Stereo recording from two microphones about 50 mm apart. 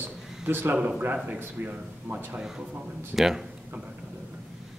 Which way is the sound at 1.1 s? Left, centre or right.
Right.